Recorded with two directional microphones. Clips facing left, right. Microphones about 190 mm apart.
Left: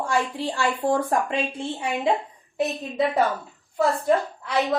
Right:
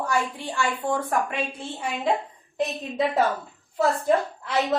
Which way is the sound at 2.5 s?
Centre (ahead or behind).